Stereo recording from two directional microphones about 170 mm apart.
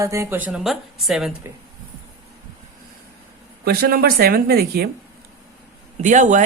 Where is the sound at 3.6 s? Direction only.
65° right (ahead or behind).